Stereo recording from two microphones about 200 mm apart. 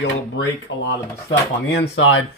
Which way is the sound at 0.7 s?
65° left (ahead or behind).